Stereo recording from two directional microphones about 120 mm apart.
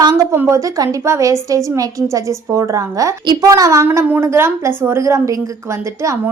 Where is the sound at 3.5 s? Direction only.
25° right (ahead or behind).